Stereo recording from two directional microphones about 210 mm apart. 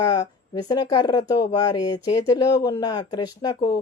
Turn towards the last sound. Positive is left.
turn(degrees=20)  # may be behind; listen again after turning